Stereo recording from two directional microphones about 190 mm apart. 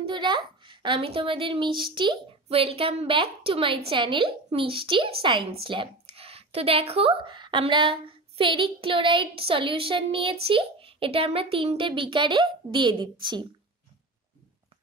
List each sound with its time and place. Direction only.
0.0 s a child's voice: 25° right (ahead or behind)